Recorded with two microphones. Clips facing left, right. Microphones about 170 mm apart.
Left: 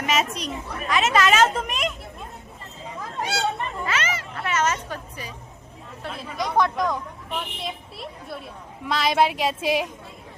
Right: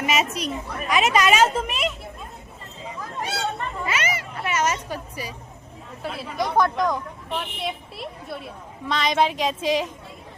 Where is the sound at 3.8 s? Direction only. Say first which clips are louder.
Right 1 dB; 10° right (ahead or behind).